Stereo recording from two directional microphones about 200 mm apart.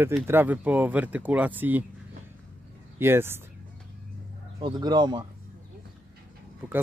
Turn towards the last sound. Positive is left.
turn(degrees=-20)  # may be behind; listen again after turning